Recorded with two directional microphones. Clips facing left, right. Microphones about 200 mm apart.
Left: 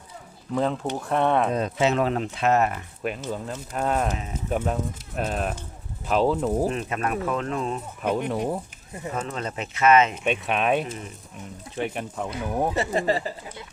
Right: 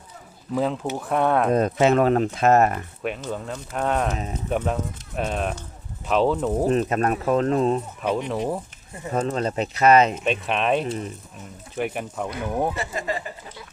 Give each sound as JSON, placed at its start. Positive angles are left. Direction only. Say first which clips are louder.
{"t": 0.5, "sound": "speech", "louder": "right 1 dB", "side_deg": -5}
{"t": 1.5, "sound": "speech", "louder": "right 4 dB", "side_deg": -50}
{"t": 3.0, "sound": "speech", "louder": "left 1 dB", "side_deg": 0}
{"t": 6.7, "sound": "speech", "louder": "right 6 dB", "side_deg": -40}
{"t": 8.3, "sound": "speech", "louder": "right 1 dB", "side_deg": 0}
{"t": 9.1, "sound": "speech", "louder": "right 8 dB", "side_deg": -35}
{"t": 10.2, "sound": "speech", "louder": "right 1 dB", "side_deg": 0}
{"t": 12.7, "sound": "speech", "louder": "left 5 dB", "side_deg": 30}